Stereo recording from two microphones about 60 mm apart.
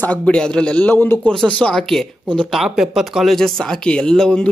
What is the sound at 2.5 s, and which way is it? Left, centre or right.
Speech, centre.